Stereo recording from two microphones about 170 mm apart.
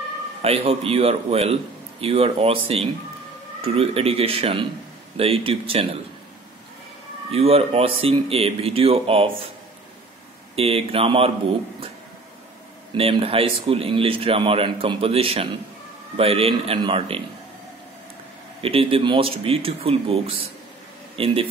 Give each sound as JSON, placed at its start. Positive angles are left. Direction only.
{"t": 0.4, "sound": "a man's voice", "side_deg": -35}
{"t": 7.2, "sound": "a man's voice", "side_deg": -35}
{"t": 10.5, "sound": "a man's voice", "side_deg": -35}
{"t": 12.9, "sound": "a man's voice", "side_deg": -35}
{"t": 18.6, "sound": "a man's voice", "side_deg": -35}